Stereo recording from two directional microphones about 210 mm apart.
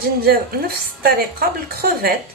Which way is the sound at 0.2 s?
45° right (ahead or behind).